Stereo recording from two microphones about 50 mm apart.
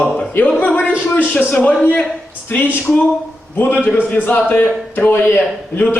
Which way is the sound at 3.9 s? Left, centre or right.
Left.